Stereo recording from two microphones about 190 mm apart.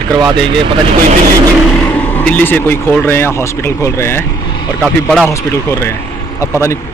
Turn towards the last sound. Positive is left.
turn(degrees=15)  # may be behind; listen again after turning